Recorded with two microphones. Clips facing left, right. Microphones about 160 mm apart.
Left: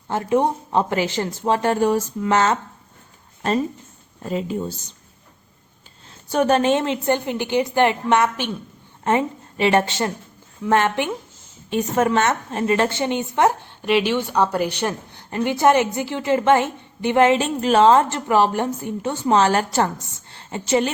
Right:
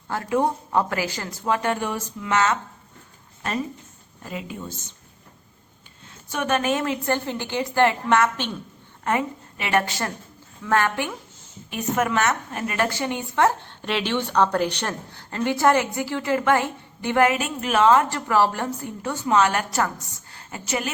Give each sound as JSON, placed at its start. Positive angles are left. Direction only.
{"t": 0.1, "sound": "a woman's voice", "side_deg": 20}
{"t": 4.2, "sound": "speech", "side_deg": 30}
{"t": 6.3, "sound": "a woman's voice", "side_deg": 35}